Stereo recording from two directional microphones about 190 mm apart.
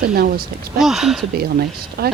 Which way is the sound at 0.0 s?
50° right (ahead or behind).